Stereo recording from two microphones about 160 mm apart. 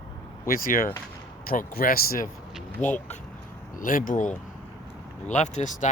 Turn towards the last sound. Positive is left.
turn(degrees=50)  # may be behind; listen again after turning